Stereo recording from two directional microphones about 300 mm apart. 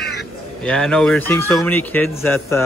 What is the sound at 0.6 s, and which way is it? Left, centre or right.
Speech, centre.